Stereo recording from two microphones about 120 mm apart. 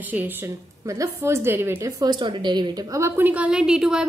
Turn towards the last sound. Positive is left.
turn(degrees=-5)  # may be behind; listen again after turning